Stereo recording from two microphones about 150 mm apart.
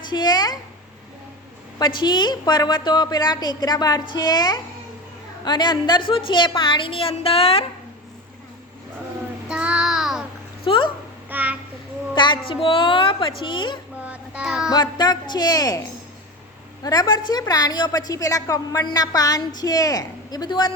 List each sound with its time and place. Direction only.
0.0 s a sound: 30° left (ahead or behind)
1.8 s a woman's voice: 30° left (ahead or behind)
9.5 s child singing: 10° right (ahead or behind)
10.7 s speech: 35° left (ahead or behind)
11.3 s a sound: 10° right (ahead or behind)
12.1 s a sound: 30° left (ahead or behind)
12.5 s speech: 35° left (ahead or behind)
14.0 s child singing: 10° right (ahead or behind)
14.7 s a woman's voice: 30° left (ahead or behind)
16.8 s a woman's voice: 30° left (ahead or behind)